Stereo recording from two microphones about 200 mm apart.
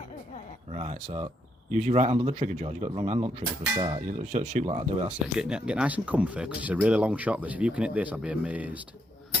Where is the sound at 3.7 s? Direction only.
25° right (ahead or behind).